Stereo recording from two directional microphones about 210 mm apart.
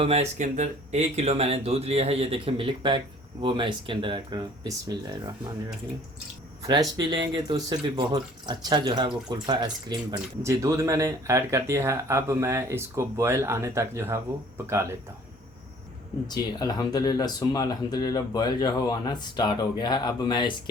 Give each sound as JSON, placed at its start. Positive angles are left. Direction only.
{"t": 0.0, "sound": "speech", "side_deg": -30}
{"t": 6.7, "sound": "speech", "side_deg": -20}
{"t": 16.2, "sound": "speech", "side_deg": 20}